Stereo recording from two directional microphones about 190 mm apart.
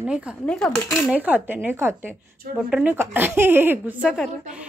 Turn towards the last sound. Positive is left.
turn(degrees=0)  # may be behind; listen again after turning